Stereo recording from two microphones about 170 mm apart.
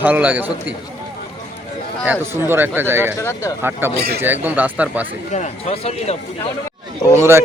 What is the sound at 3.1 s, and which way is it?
Speech, 15° left (ahead or behind).